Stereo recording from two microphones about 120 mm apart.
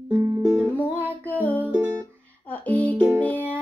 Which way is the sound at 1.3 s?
15° left (ahead or behind).